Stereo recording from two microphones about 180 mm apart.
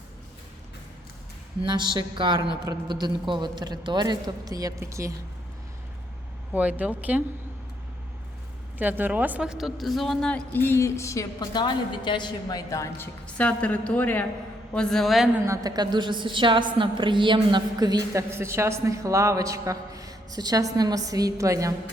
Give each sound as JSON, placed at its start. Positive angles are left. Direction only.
{"t": 1.6, "sound": "a woman's voice", "side_deg": -25}
{"t": 6.5, "sound": "speech", "side_deg": -10}
{"t": 8.8, "sound": "a woman's voice", "side_deg": -10}
{"t": 15.4, "sound": "a woman's voice", "side_deg": -20}